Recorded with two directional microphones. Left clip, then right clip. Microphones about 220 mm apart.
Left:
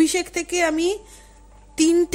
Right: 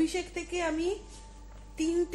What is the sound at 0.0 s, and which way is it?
A woman's voice, 45° left (ahead or behind).